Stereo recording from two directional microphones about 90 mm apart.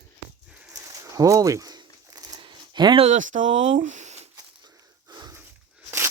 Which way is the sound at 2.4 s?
60° right (ahead or behind).